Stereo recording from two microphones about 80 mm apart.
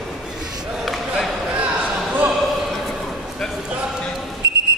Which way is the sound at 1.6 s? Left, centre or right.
Centre.